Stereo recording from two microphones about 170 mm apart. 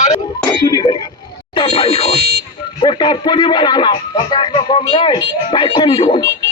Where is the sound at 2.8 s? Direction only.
25° left (ahead or behind).